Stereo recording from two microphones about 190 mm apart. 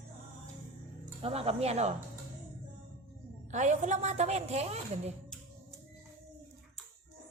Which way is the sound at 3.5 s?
40° right (ahead or behind).